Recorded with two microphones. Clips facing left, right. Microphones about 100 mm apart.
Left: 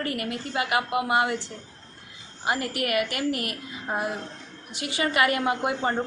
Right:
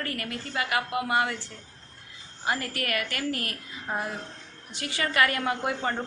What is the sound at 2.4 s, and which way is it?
A woman's voice, 15° left (ahead or behind).